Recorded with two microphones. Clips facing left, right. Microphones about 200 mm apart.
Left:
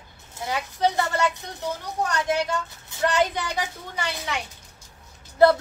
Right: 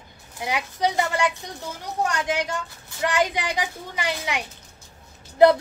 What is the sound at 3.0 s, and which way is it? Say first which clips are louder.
A woman's voice: even; 15° right (ahead or behind).